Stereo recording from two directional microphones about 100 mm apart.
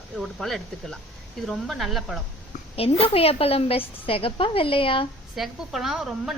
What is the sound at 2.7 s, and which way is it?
A woman's voice, 80° left.